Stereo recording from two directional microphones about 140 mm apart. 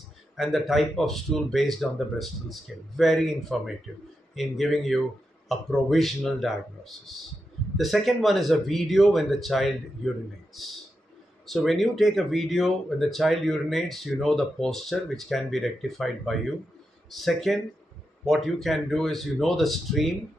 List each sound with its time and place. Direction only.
0.4 s speech: centre (ahead or behind)